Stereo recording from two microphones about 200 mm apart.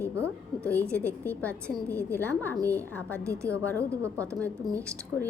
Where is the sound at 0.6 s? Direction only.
5° left (ahead or behind).